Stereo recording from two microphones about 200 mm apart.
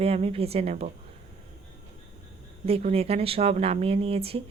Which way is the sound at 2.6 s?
30° right (ahead or behind).